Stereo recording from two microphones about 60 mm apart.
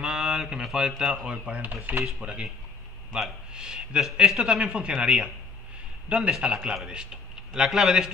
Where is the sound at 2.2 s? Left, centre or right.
Centre.